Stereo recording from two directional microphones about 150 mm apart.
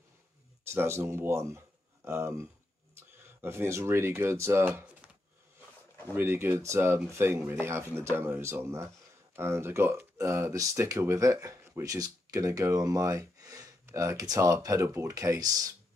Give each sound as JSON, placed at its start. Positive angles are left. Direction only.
{"t": 0.7, "sound": "speech", "side_deg": -15}
{"t": 6.1, "sound": "speech", "side_deg": -15}